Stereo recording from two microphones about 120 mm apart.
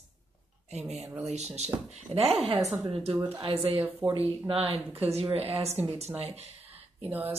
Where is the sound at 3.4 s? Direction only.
50° right (ahead or behind).